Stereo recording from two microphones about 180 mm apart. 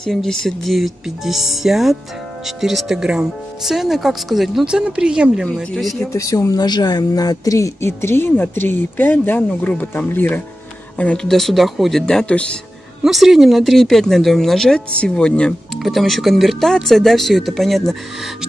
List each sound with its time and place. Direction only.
0.0 s speech: 5° left (ahead or behind)
6.1 s a woman's voice: 20° left (ahead or behind); by 18.3 s centre (ahead or behind)